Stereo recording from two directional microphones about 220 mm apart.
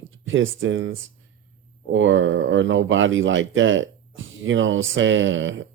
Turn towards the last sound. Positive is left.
turn(degrees=-60)  # may be behind; listen again after turning